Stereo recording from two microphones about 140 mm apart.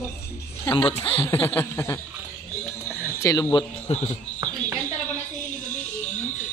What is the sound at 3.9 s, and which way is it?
Speech, 50° left (ahead or behind).